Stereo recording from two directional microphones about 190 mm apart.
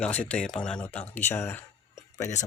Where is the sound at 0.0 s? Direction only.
5° left (ahead or behind).